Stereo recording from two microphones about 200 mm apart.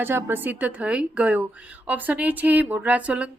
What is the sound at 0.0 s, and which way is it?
A woman's voice, 10° right (ahead or behind).